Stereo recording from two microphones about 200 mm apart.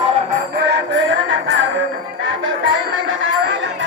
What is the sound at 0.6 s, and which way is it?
Music, 60° right (ahead or behind).